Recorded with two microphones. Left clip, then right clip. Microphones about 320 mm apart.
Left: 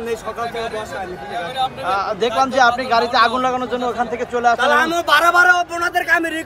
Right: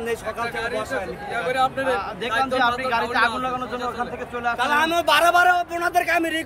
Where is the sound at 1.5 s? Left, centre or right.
Right.